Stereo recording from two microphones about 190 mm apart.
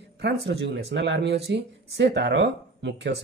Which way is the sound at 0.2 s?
60° right (ahead or behind).